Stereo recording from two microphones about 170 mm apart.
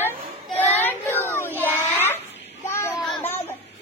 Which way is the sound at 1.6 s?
10° left (ahead or behind).